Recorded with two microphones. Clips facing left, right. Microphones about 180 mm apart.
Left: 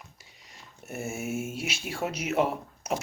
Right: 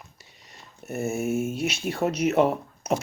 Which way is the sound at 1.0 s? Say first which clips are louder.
Right 7 dB; 10° left (ahead or behind).